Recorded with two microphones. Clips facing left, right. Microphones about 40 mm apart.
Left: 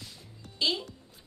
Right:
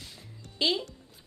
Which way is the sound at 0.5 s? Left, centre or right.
Right.